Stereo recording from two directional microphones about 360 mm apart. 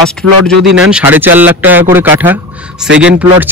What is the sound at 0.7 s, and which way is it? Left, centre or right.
Speech, centre.